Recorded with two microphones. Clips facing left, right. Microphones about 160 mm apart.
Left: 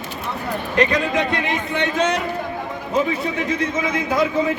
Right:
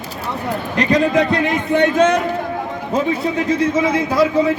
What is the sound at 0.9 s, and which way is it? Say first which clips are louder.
A man's voice: right 6 dB; 40° right (ahead or behind).